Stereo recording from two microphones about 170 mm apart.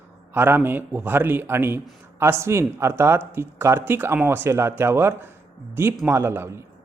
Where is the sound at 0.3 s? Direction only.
10° right (ahead or behind).